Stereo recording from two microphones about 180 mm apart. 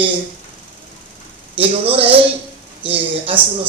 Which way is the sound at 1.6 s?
30° right (ahead or behind).